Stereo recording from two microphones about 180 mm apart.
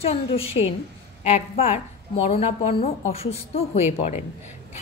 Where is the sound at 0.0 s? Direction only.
35° left (ahead or behind).